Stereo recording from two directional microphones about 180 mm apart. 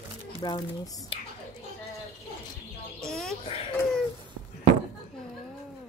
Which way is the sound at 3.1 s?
Centre (ahead or behind).